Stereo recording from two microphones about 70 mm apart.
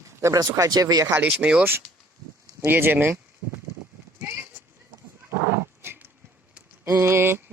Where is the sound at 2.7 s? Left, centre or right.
Right.